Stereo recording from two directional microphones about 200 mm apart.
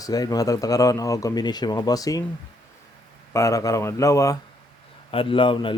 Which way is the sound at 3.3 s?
15° left (ahead or behind).